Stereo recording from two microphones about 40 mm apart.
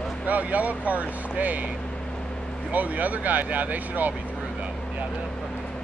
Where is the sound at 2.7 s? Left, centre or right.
Right.